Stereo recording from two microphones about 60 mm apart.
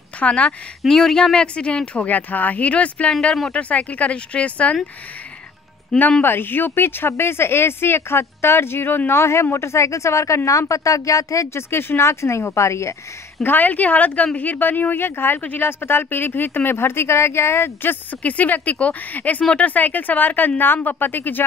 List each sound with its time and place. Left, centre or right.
0.2 s speech: left
0.8 s speech: centre; by 4.7 s left
5.9 s speech: centre
6.2 s speech: left
9.1 s speech: left
11.5 s speech: left
13.4 s speech: left
18.2 s speech: left